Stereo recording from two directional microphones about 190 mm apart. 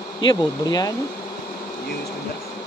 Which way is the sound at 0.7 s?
20° left (ahead or behind).